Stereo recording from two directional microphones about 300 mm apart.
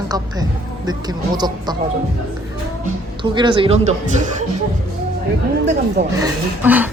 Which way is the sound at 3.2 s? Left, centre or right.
Centre.